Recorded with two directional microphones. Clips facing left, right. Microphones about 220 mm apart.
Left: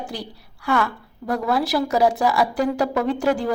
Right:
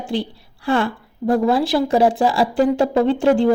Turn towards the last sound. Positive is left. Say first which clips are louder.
# right 6 dB
turn(degrees=-30)  # may be behind; listen again after turning